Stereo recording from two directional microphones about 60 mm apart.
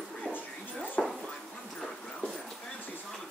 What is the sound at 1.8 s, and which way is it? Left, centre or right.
Dog, centre.